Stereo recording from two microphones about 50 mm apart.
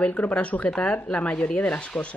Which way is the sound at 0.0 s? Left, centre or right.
Left.